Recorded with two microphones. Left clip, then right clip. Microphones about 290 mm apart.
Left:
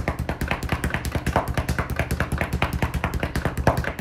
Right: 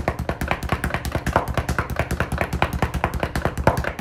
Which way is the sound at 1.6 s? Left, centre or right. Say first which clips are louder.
Right 2 dB; centre.